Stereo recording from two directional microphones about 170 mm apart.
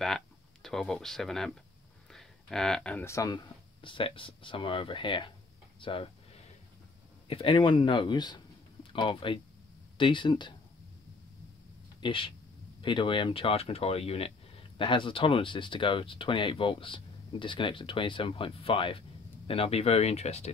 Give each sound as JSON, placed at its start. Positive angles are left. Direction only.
{"t": 0.0, "sound": "speech", "side_deg": 0}
{"t": 3.8, "sound": "speech", "side_deg": 30}
{"t": 5.8, "sound": "a sound", "side_deg": 30}
{"t": 7.2, "sound": "speech", "side_deg": 35}
{"t": 12.0, "sound": "speech", "side_deg": 30}